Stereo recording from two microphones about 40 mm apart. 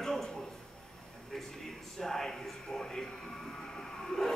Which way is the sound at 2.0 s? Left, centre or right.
Centre.